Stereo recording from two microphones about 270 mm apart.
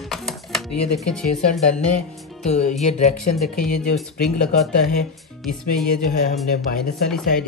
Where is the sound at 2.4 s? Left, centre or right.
Left.